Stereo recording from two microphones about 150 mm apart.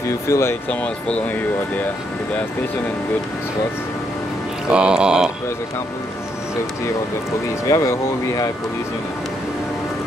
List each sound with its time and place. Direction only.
0.3 s speech: 15° left (ahead or behind)
4.6 s speech: 5° right (ahead or behind)
7.6 s speech: 20° left (ahead or behind)